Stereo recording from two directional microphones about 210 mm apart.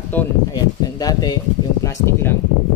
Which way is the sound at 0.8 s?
20° left (ahead or behind).